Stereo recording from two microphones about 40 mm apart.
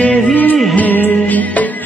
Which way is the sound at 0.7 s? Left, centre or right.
Left.